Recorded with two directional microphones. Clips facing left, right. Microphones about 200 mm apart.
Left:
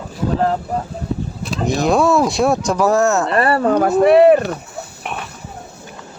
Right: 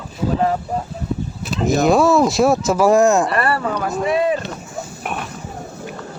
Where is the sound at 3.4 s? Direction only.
25° left (ahead or behind).